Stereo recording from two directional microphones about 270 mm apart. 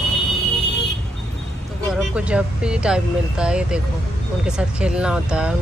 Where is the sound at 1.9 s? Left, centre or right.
Centre.